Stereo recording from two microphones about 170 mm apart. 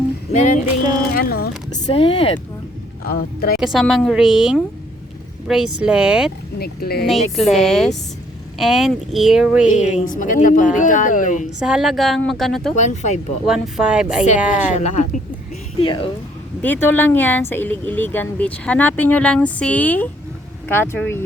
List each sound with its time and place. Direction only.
0.3 s a woman's voice: 45° left (ahead or behind)
1.1 s speech: 60° left (ahead or behind)
1.9 s speech: 30° left (ahead or behind)
3.0 s speech: 60° left (ahead or behind)
3.6 s speech: centre (ahead or behind)
6.6 s speech: 65° left (ahead or behind)
7.3 s speech: centre (ahead or behind)
9.6 s a woman's voice: 45° left (ahead or behind)
11.6 s speech: centre (ahead or behind)
12.7 s a woman's voice: 45° left (ahead or behind)
13.4 s speech: centre (ahead or behind)
14.7 s a woman's voice: 45° left (ahead or behind)
15.8 s speech: 30° left (ahead or behind)
16.6 s speech: 10° left (ahead or behind)